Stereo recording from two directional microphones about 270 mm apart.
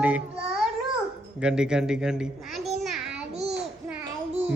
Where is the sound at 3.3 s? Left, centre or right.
Right.